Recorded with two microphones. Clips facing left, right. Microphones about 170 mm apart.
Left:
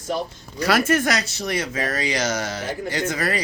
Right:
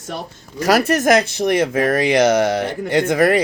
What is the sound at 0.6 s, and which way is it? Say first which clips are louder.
Speech: right 4 dB; 40° right (ahead or behind).